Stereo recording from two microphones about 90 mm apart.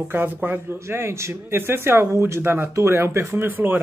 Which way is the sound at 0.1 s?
20° right (ahead or behind).